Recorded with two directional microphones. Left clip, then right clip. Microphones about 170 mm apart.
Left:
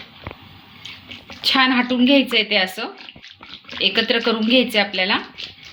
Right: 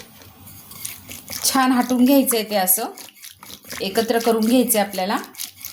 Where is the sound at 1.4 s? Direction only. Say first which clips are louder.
Left 2 dB; 50° right (ahead or behind).